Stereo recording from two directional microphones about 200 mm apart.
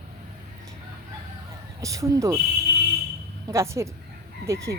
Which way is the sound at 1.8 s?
15° right (ahead or behind).